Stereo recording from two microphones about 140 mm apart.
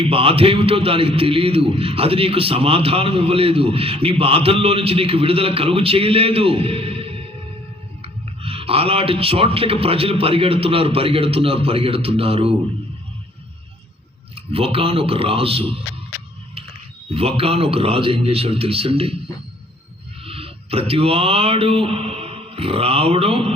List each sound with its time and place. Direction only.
0.0 s a man's voice: 40° right (ahead or behind)
14.3 s a man's voice: 40° right (ahead or behind)
17.2 s a man's voice: 45° right (ahead or behind)
20.2 s speech: 40° right (ahead or behind)